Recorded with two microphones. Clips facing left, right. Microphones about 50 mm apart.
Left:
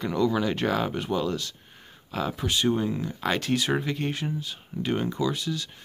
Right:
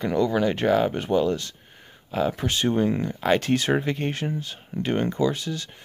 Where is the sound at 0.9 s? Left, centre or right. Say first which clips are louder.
Right 5 dB; right.